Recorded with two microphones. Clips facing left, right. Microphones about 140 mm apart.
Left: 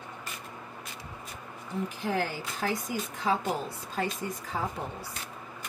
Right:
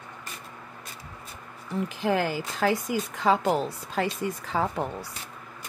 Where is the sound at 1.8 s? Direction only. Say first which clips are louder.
Right 5 dB; 90° right.